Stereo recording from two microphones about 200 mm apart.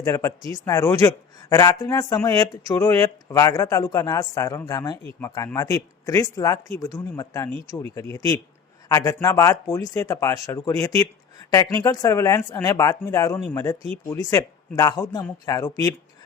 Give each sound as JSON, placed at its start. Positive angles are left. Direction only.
{"t": 0.0, "sound": "speech", "side_deg": 15}